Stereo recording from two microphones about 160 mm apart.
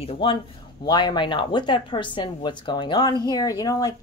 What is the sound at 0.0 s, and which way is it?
Speech, 35° left (ahead or behind).